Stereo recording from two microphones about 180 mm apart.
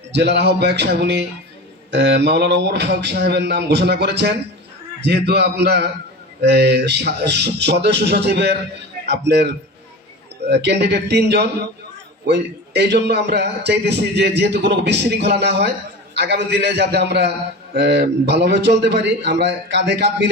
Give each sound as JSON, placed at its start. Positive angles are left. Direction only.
{"t": 0.1, "sound": "a man's voice", "side_deg": -70}
{"t": 10.5, "sound": "a man's voice", "side_deg": -70}